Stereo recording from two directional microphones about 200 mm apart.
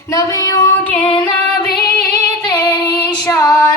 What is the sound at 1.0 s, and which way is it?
Music, 25° left (ahead or behind).